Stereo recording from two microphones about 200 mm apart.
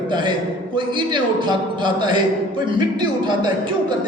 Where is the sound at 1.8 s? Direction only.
20° right (ahead or behind).